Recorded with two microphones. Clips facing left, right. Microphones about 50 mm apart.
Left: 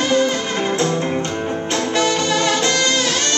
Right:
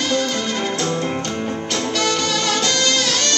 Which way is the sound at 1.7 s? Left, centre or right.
Left.